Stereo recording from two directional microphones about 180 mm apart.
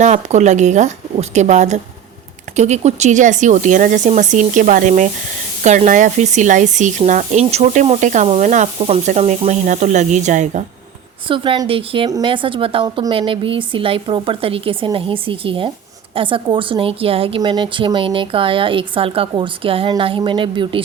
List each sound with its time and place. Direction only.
0.0 s speech: 40° right (ahead or behind)
11.3 s a woman's voice: 30° right (ahead or behind)